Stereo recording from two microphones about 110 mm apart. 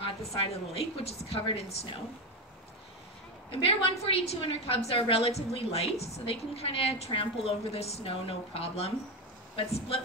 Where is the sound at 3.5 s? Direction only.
60° left (ahead or behind).